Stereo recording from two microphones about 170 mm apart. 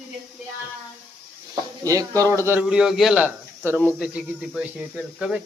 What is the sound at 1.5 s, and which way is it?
A man's voice, 20° right (ahead or behind).